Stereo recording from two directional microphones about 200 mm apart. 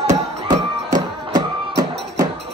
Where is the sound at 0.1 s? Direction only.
20° right (ahead or behind).